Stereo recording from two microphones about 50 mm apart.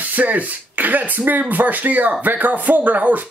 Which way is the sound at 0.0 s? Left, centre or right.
Right.